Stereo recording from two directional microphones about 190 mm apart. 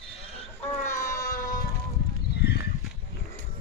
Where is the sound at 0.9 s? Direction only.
15° left (ahead or behind).